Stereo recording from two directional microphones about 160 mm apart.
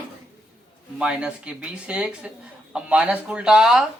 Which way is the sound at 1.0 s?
5° right (ahead or behind).